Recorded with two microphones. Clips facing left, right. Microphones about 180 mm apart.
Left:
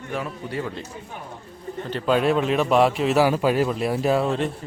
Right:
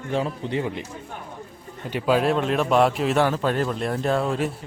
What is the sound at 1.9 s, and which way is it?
A man's voice, 5° right (ahead or behind).